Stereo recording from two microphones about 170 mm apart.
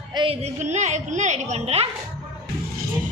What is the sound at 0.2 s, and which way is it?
Music, 25° right (ahead or behind).